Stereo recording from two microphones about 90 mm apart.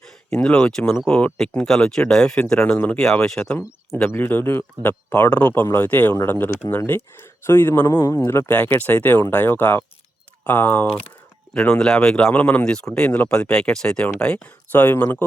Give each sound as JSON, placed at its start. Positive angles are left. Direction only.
{"t": 0.3, "sound": "speech", "side_deg": 10}
{"t": 3.0, "sound": "speech", "side_deg": 5}
{"t": 4.1, "sound": "speech", "side_deg": 25}